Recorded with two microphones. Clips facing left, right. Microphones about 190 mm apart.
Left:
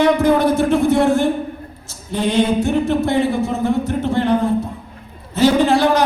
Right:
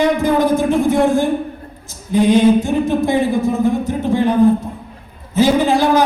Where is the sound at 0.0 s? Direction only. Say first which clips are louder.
Left 1 dB; 65° left (ahead or behind).